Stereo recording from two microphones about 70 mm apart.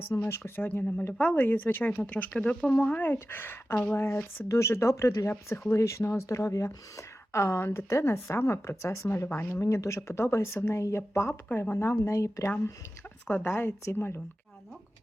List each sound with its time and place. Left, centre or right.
0.3 s a woman's voice: left
13.6 s a woman's voice: left